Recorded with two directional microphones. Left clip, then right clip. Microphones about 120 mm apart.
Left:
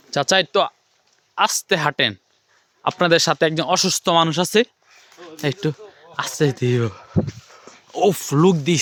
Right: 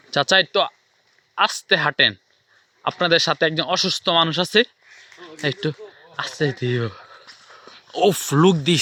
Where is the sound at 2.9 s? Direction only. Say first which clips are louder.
Left 1 dB; 50° left (ahead or behind).